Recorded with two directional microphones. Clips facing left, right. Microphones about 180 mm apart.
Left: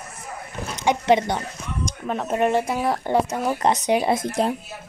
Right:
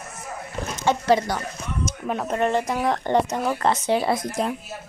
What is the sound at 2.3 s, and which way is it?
Speech, 15° left (ahead or behind).